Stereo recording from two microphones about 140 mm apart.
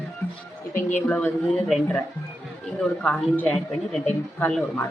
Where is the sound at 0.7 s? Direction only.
65° left (ahead or behind).